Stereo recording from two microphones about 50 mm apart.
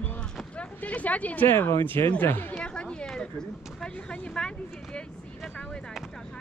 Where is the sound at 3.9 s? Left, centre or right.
Left.